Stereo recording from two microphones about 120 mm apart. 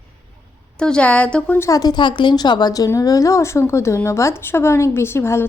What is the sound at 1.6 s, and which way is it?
A woman's voice, 30° left (ahead or behind).